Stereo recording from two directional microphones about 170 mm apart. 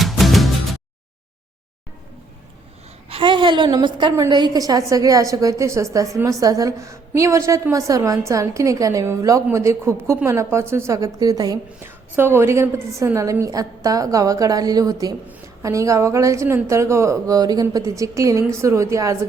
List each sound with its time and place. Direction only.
0.0 s music: centre (ahead or behind)
3.1 s a woman's voice: 30° right (ahead or behind)